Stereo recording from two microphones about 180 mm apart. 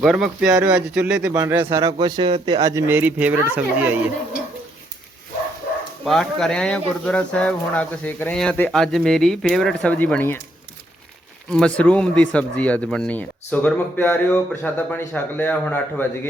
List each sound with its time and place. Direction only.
0.0 s speech: 5° right (ahead or behind)
6.1 s speech: centre (ahead or behind)
11.5 s speech: 5° left (ahead or behind)